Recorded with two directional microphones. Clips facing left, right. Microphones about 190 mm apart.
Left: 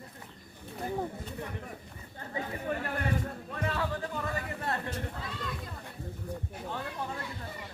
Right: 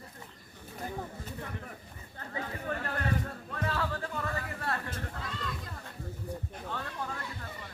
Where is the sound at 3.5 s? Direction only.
20° left (ahead or behind).